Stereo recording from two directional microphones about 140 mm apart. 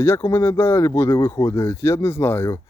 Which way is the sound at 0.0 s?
20° left (ahead or behind).